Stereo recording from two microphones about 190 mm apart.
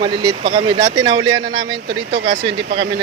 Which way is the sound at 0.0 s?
30° right (ahead or behind).